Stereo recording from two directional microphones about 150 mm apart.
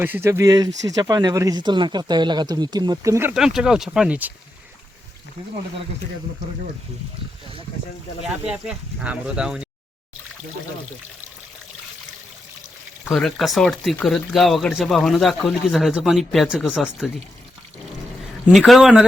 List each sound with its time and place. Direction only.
0.0 s speech: 15° right (ahead or behind)
3.3 s speech: 5° right (ahead or behind)
8.4 s speech: 5° right (ahead or behind)
13.1 s speech: centre (ahead or behind)
18.5 s speech: centre (ahead or behind)